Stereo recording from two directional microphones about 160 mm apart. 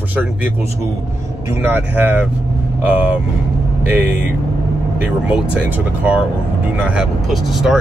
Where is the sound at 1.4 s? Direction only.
15° right (ahead or behind).